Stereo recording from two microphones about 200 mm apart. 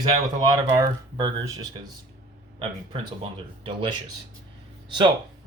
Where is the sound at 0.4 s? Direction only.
20° right (ahead or behind).